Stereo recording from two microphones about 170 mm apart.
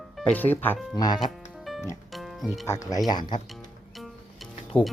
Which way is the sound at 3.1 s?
25° left (ahead or behind).